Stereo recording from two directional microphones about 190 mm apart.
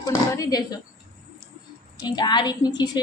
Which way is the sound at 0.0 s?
20° left (ahead or behind).